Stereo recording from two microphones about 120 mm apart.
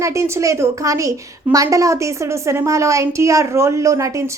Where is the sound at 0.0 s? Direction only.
25° right (ahead or behind).